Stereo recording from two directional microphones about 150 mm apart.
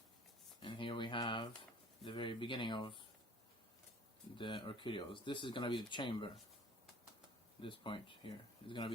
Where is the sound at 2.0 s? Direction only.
35° left (ahead or behind).